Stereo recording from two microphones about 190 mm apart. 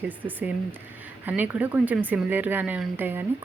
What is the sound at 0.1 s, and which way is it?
Speech, 10° right (ahead or behind).